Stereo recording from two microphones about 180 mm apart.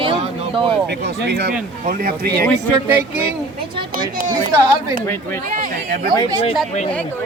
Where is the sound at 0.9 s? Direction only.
70° right (ahead or behind).